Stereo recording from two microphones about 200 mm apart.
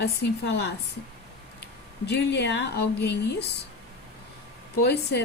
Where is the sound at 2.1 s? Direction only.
60° left (ahead or behind).